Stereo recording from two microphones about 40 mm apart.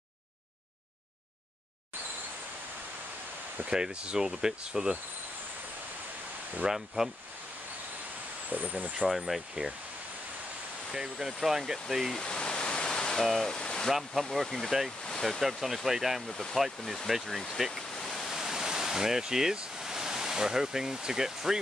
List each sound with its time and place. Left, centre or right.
3.7 s speech: right
6.6 s speech: centre
8.5 s speech: right
9.1 s speech: centre
10.9 s speech: centre
12.2 s pink noise: left
13.2 s speech: centre
13.5 s stream: centre
14.3 s speech: centre
17.9 s waves: centre
18.3 s pink noise: centre
19.8 s speech: centre